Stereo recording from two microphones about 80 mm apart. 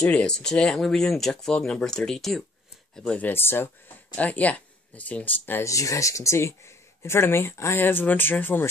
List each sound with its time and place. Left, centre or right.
0.0 s speech: centre
3.2 s speech: left
4.1 s speech: centre
5.6 s speech: left